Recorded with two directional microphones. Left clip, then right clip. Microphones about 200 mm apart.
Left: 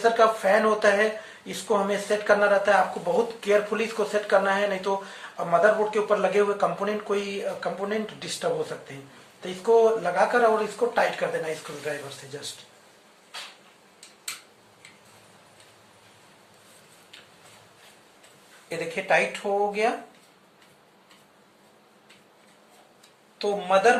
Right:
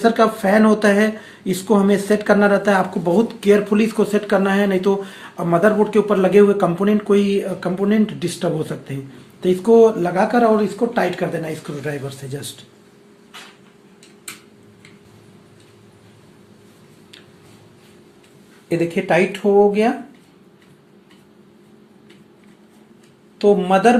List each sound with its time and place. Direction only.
0.0 s speech: 55° right (ahead or behind)
18.7 s speech: 50° right (ahead or behind)
23.4 s speech: 50° right (ahead or behind)